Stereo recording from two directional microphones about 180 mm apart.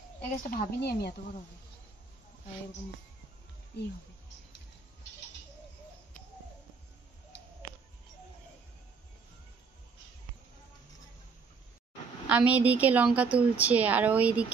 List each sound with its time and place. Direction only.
0.5 s speech: 55° left (ahead or behind)
3.7 s speech: 70° left (ahead or behind)
12.3 s a woman's voice: 10° right (ahead or behind)